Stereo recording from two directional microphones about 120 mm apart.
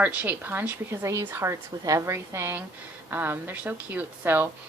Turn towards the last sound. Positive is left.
turn(degrees=-15)  # may be behind; listen again after turning